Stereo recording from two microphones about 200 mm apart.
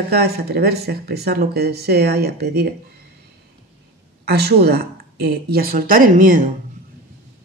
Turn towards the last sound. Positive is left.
turn(degrees=-40)  # may be behind; listen again after turning